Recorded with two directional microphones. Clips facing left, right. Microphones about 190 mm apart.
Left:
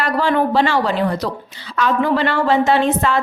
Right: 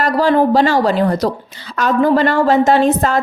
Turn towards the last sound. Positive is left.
turn(degrees=-40)  # may be behind; listen again after turning